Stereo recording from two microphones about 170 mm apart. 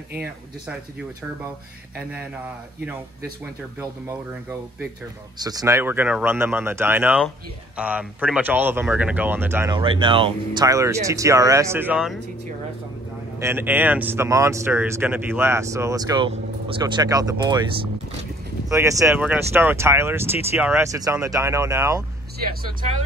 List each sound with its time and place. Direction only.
5.4 s speech: 20° right (ahead or behind)
9.8 s speech: 30° right (ahead or behind); by 12.2 s 5° right (ahead or behind)
13.4 s speech: 15° right (ahead or behind)
18.7 s speech: 20° right (ahead or behind)